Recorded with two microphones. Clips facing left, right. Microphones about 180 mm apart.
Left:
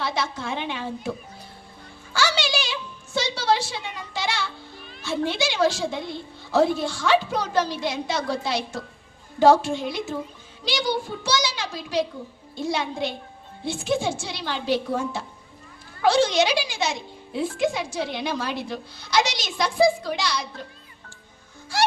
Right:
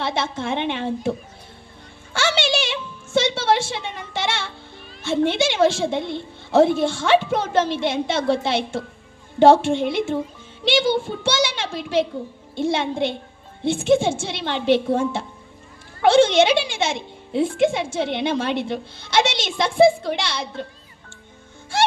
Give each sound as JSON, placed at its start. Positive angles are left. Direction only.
{"t": 0.0, "sound": "a woman's voice", "side_deg": -25}
{"t": 2.1, "sound": "a sound", "side_deg": -25}
{"t": 5.0, "sound": "a woman's voice", "side_deg": -25}